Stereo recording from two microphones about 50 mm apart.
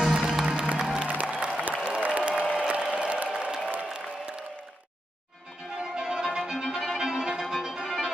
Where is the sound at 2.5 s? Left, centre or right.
Right.